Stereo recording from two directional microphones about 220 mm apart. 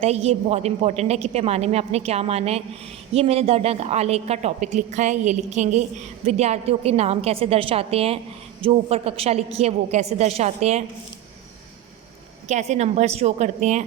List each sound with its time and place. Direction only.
0.0 s a woman's voice: 30° right (ahead or behind)
12.5 s a woman's voice: 30° right (ahead or behind)